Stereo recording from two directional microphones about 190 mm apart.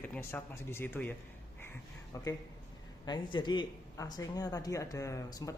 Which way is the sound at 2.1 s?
20° left (ahead or behind).